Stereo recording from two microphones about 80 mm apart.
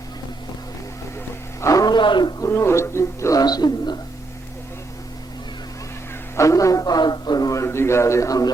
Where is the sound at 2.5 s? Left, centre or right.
Left.